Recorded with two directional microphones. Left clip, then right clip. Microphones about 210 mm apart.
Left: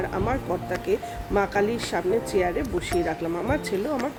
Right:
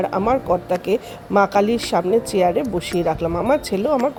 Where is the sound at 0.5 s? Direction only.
30° right (ahead or behind).